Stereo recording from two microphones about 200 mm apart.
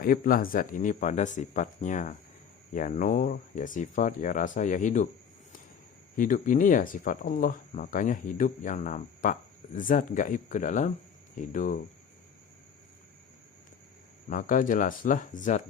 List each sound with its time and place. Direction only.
0.0 s speech: 45° left (ahead or behind)
6.1 s speech: 40° left (ahead or behind)
14.3 s speech: 40° left (ahead or behind)